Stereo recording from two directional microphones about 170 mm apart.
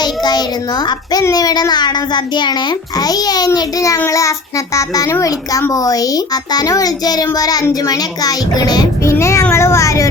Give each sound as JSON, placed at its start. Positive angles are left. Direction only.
{"t": 0.0, "sound": "a child's voice", "side_deg": 25}